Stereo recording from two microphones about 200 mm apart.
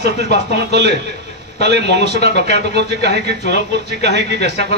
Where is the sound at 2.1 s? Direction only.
55° right (ahead or behind).